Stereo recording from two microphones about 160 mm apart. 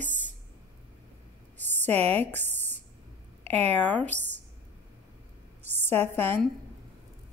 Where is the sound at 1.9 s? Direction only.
40° right (ahead or behind).